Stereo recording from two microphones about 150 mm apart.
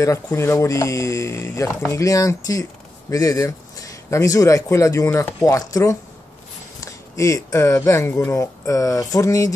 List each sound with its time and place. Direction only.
0.0 s speech: 20° left (ahead or behind)